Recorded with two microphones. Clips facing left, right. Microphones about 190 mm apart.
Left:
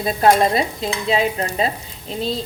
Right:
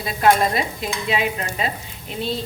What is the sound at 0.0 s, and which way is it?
A woman's voice, 35° left (ahead or behind).